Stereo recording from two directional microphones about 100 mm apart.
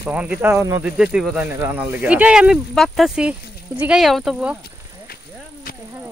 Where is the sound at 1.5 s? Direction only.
20° right (ahead or behind).